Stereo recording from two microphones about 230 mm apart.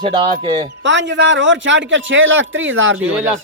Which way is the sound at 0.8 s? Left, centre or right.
Right.